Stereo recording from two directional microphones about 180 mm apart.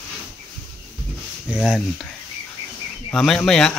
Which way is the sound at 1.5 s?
5° right (ahead or behind).